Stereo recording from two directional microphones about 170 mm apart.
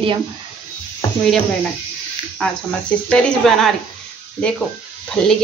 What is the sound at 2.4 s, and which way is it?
Speech, 5° left (ahead or behind).